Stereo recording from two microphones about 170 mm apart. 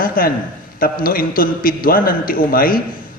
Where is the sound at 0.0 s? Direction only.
60° left (ahead or behind).